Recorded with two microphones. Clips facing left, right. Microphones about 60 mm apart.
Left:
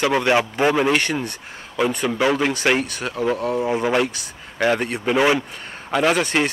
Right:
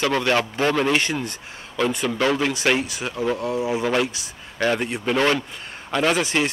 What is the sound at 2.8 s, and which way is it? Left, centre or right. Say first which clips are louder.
Speech: left 2 dB; centre.